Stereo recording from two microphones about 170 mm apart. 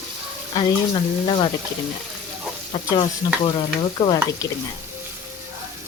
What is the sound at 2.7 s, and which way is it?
Speech, 30° left (ahead or behind).